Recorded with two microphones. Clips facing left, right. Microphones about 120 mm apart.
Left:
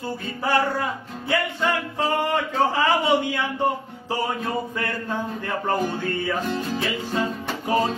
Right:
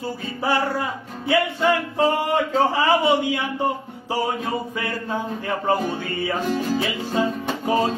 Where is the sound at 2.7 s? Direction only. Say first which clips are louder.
Right 2 dB; 15° right (ahead or behind).